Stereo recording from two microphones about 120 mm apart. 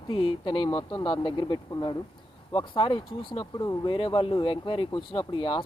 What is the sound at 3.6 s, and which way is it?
Speech, 30° left (ahead or behind).